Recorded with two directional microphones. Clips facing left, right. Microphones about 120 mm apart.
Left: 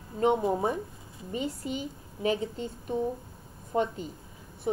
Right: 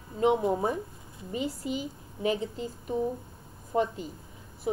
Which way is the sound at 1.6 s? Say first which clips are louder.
Right 1 dB; 40° left (ahead or behind).